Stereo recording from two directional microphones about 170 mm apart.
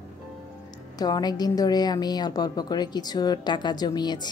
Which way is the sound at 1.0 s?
25° left (ahead or behind).